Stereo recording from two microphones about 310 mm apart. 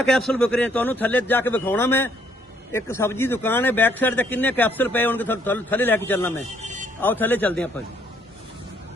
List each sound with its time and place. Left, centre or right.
0.1 s speech: centre
6.6 s music: right
7.0 s speech: centre